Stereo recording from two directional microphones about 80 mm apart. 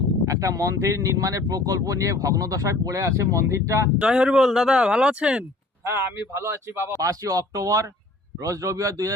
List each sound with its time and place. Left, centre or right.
0.3 s speech: right
3.9 s speech: centre
5.8 s speech: right
7.0 s speech: right